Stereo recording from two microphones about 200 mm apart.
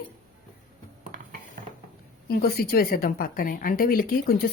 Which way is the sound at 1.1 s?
45° right (ahead or behind).